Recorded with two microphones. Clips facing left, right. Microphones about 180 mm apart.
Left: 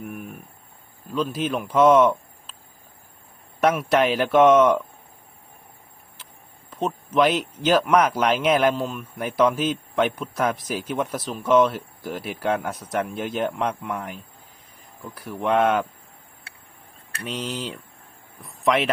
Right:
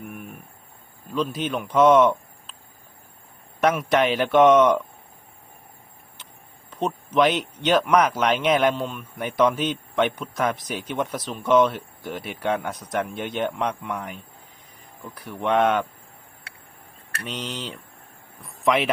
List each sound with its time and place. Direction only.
0.0 s a sound: 5° left (ahead or behind)
1.1 s speech: 5° left (ahead or behind)
3.6 s speech: 5° left (ahead or behind)
6.7 s speech: 5° left (ahead or behind)
17.2 s speech: 5° left (ahead or behind)